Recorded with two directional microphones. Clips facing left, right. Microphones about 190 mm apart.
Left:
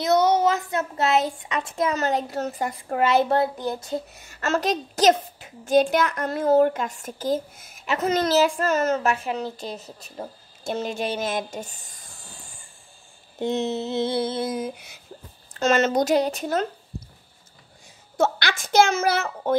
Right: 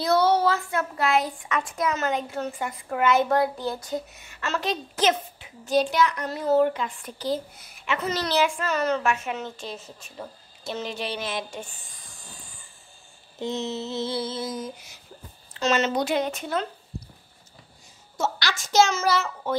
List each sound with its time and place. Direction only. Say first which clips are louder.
0.0 s speech: left 2 dB; 20° left (ahead or behind)
4.2 s a woman's voice: left 5 dB; 45° left (ahead or behind)
10.7 s a woman's voice: left 4 dB; 50° left (ahead or behind)
13.4 s a sound: left 4 dB; 55° left (ahead or behind)
15.6 s a woman's voice: left 3 dB; 50° left (ahead or behind)
18.1 s a sound: left 5 dB; 55° left (ahead or behind)